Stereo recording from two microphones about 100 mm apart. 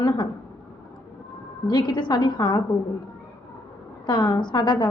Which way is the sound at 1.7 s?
50° left (ahead or behind).